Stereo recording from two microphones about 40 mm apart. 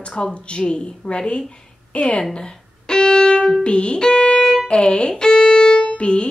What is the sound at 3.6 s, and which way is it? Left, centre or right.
Speech, left.